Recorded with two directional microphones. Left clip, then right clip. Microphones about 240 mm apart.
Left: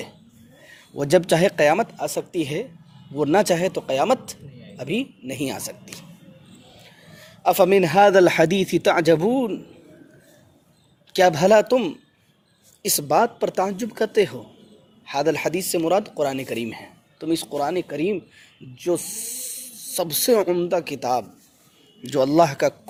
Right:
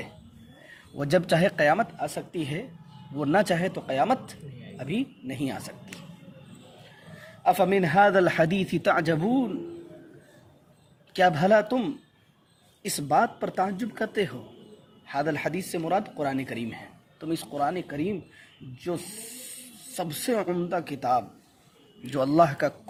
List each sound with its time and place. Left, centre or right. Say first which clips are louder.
0.9 s speech: left 6 dB; left
7.4 s speech: left 6 dB; left
11.1 s speech: left 5 dB; left